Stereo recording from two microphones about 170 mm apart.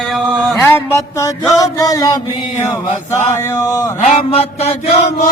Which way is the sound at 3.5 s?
20° left (ahead or behind).